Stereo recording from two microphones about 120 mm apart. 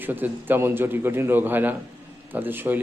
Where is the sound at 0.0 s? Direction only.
15° right (ahead or behind).